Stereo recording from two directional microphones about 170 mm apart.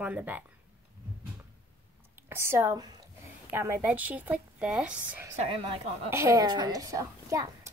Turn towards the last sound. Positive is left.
turn(degrees=-20)  # may be behind; listen again after turning